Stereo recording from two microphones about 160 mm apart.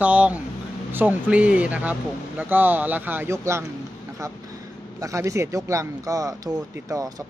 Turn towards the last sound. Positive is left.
turn(degrees=-15)  # may be behind; listen again after turning